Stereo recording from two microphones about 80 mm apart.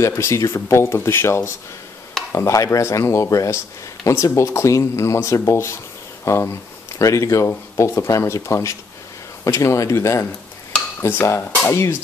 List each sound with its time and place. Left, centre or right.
0.0 s speech: left